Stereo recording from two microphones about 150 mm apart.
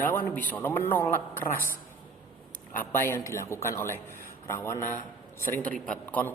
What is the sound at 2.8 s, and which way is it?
A man's voice, 15° left (ahead or behind).